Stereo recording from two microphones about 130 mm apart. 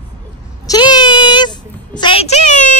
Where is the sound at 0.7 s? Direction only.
35° left (ahead or behind).